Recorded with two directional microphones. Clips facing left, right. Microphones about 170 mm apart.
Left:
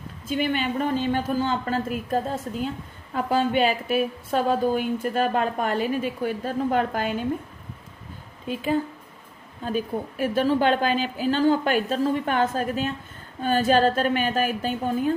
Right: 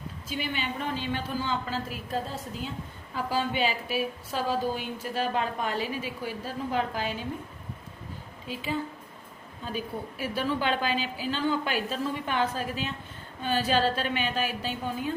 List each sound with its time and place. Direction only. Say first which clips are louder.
0.3 s a woman's voice: left 8 dB; 50° left (ahead or behind)
8.4 s a woman's voice: left 7 dB; 50° left (ahead or behind)